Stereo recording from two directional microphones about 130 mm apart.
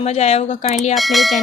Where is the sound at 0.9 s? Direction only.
Centre (ahead or behind).